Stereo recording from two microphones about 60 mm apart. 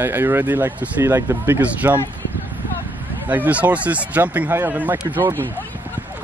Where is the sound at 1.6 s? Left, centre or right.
Right.